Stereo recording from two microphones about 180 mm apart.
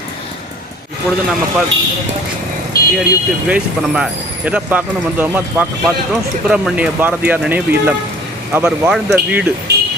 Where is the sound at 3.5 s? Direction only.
5° right (ahead or behind).